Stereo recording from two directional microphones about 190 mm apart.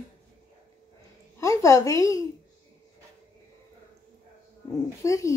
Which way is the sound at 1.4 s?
15° left (ahead or behind).